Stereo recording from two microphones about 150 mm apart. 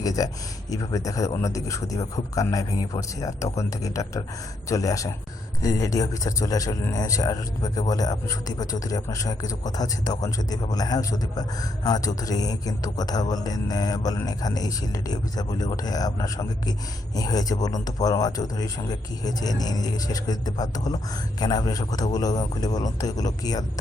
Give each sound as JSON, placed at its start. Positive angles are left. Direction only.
{"t": 0.0, "sound": "a man's voice", "side_deg": 25}